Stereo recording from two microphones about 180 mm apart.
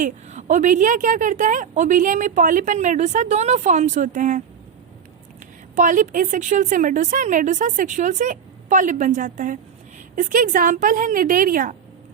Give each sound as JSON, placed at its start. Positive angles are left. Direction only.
{"t": 0.0, "sound": "a woman's voice", "side_deg": -40}
{"t": 5.7, "sound": "a woman's voice", "side_deg": -45}